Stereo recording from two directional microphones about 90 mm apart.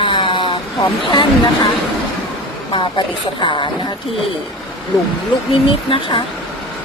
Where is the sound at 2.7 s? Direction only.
60° left (ahead or behind).